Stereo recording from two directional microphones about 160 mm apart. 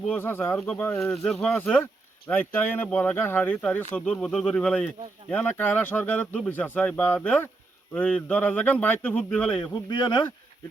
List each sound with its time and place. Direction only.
0.1 s speech: 15° left (ahead or behind)
9.9 s speech: 30° left (ahead or behind)